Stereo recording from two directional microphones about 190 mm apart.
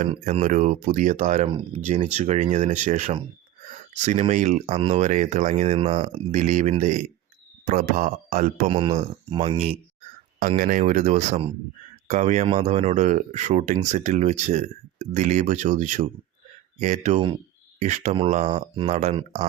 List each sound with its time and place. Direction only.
0.1 s speech: 35° right (ahead or behind)
5.7 s speech: 25° right (ahead or behind)
10.6 s speech: 45° right (ahead or behind)
17.2 s speech: 25° right (ahead or behind)
17.7 s speech: 40° right (ahead or behind)
19.1 s speech: 25° right (ahead or behind)